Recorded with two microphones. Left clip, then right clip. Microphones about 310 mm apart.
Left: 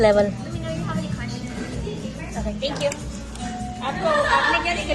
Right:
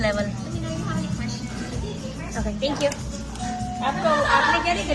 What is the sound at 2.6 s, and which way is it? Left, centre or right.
Speech, right.